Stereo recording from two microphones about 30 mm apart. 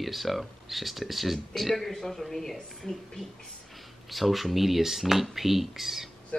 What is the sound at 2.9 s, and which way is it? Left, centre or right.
Speech, left.